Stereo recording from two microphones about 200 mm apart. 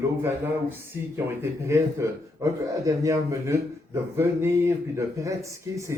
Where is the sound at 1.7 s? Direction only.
15° right (ahead or behind).